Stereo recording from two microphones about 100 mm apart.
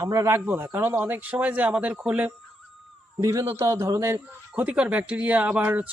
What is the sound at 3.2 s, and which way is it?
A man's voice, 35° right (ahead or behind).